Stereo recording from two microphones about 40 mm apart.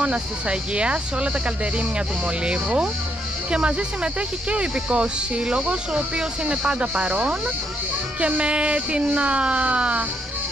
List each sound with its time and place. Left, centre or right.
0.0 s speech: right